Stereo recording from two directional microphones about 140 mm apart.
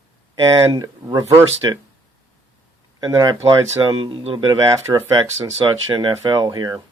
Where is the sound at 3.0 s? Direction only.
25° right (ahead or behind).